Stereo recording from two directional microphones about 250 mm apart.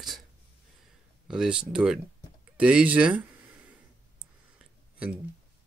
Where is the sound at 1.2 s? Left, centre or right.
Centre.